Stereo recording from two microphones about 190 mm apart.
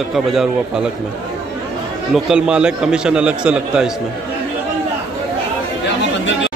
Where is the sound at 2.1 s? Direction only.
5° right (ahead or behind).